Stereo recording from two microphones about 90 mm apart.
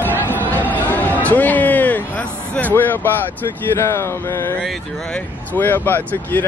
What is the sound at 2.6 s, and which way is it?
Speech, 20° left (ahead or behind).